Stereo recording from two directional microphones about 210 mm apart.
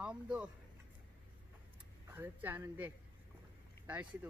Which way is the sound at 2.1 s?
10° right (ahead or behind).